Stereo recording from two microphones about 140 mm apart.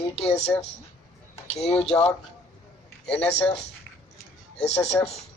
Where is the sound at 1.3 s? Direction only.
50° left (ahead or behind).